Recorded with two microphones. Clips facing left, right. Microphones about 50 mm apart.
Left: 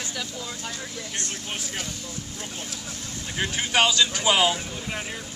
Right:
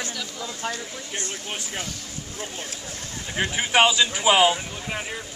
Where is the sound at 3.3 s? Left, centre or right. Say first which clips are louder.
Right 3 dB; centre.